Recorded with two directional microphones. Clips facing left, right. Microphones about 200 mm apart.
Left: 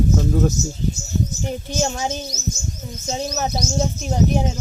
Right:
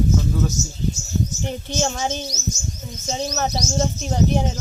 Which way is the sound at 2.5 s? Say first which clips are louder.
Left 1 dB; 60° left (ahead or behind).